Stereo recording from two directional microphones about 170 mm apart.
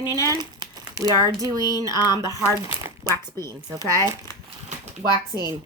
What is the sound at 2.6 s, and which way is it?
Crumpling, 20° right (ahead or behind).